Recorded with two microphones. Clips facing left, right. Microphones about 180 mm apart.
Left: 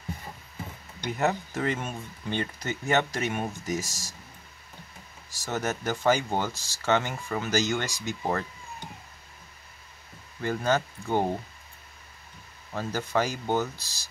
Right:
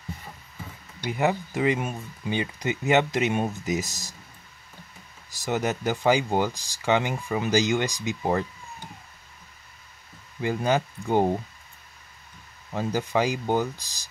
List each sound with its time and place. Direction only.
1.0 s speech: 10° right (ahead or behind)
5.4 s speech: 15° right (ahead or behind)
10.4 s speech: 15° right (ahead or behind)
12.7 s speech: 15° right (ahead or behind)